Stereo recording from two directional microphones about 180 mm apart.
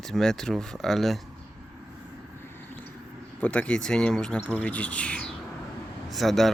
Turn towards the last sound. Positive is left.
turn(degrees=0)  # may be behind; listen again after turning